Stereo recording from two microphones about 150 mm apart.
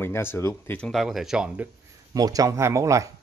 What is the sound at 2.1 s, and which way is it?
Speech, 25° right (ahead or behind).